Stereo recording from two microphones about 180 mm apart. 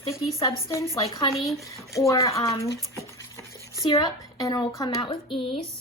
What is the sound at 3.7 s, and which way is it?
A woman's voice, 20° left (ahead or behind).